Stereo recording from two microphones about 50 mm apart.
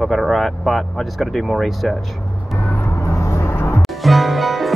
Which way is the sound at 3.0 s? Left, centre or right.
Left.